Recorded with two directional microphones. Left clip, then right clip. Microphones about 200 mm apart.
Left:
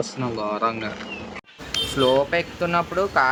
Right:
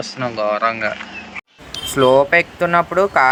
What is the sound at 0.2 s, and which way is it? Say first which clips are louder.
Speech: right 8 dB; 25° right (ahead or behind).